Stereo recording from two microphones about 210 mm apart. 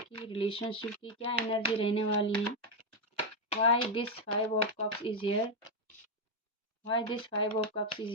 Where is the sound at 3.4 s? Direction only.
30° left (ahead or behind).